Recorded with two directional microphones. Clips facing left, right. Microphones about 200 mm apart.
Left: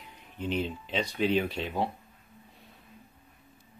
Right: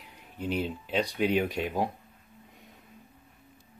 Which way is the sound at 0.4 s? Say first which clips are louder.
Even; 10° right (ahead or behind).